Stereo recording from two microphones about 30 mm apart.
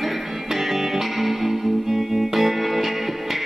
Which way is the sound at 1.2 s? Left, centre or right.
Centre.